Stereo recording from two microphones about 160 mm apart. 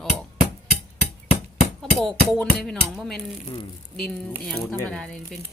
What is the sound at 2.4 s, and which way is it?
Speech, 5° left (ahead or behind).